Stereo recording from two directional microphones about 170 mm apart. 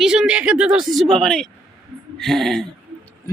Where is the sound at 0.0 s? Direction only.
5° right (ahead or behind).